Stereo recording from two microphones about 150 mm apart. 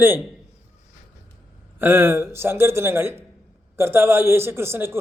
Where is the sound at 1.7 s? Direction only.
15° right (ahead or behind).